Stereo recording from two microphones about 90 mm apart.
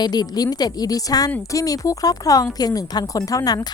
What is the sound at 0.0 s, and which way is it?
A woman's voice, 50° left (ahead or behind).